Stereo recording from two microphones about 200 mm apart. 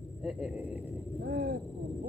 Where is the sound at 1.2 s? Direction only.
50° right (ahead or behind).